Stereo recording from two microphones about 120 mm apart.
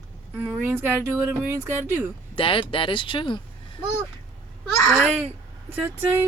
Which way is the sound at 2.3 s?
45° left (ahead or behind).